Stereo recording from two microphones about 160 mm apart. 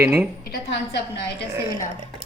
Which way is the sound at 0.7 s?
90° left.